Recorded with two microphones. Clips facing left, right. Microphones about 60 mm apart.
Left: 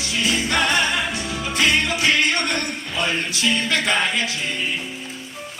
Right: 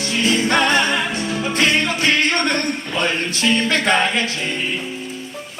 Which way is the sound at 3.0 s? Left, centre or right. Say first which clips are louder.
Right 2 dB; right.